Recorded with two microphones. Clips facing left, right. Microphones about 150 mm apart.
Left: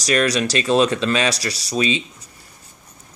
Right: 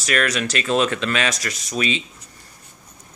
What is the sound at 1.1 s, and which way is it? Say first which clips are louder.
Speech: left 3 dB; 30° left (ahead or behind).